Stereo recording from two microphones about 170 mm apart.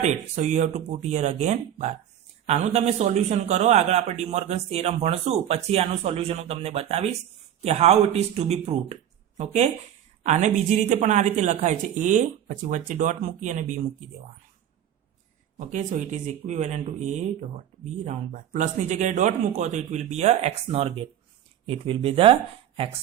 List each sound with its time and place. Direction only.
0.0 s a man's voice: 45° right (ahead or behind)
15.5 s a man's voice: 45° right (ahead or behind)